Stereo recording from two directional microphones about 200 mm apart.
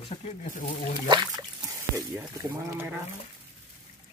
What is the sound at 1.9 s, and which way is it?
Speech, 15° right (ahead or behind).